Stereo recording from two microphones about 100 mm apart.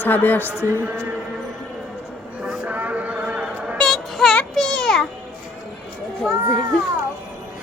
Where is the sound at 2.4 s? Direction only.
15° right (ahead or behind).